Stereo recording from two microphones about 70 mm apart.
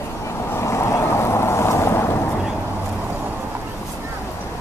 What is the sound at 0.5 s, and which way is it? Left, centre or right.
Boat, left.